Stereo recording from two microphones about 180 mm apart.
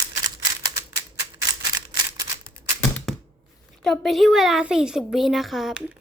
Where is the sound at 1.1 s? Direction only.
20° right (ahead or behind).